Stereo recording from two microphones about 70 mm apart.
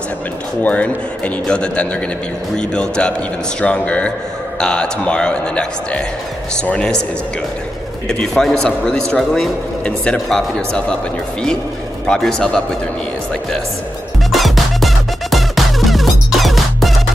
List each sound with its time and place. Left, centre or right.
0.6 s speech: left
8.1 s speech: centre
12.2 s speech: centre
14.3 s music: centre